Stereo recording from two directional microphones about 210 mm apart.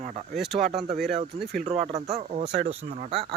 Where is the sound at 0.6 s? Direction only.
Centre (ahead or behind).